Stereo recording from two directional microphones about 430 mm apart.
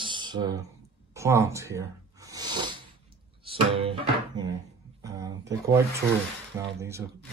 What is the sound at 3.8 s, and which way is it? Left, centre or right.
Music, centre.